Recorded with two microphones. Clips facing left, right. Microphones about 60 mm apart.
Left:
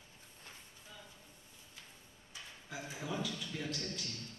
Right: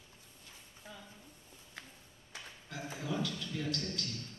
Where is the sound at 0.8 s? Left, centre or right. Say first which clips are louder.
Right 6 dB; right.